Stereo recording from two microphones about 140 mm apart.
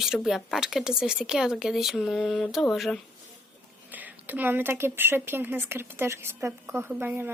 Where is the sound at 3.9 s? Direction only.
10° right (ahead or behind).